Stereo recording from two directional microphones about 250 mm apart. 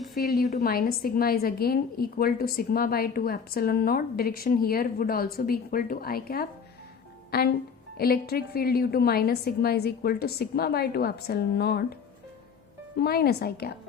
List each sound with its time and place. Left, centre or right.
0.3 s a woman's voice: centre
0.5 s a woman's voice: left
13.0 s a woman's voice: left